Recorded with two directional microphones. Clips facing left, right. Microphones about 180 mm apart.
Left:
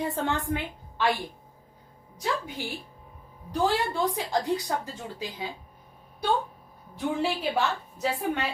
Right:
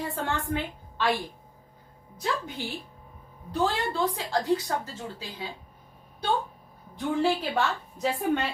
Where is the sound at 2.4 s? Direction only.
10° left (ahead or behind).